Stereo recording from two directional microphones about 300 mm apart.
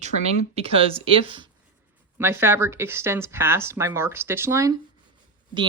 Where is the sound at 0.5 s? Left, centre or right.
Centre.